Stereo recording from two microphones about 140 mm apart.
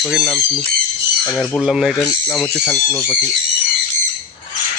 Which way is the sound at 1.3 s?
10° left (ahead or behind).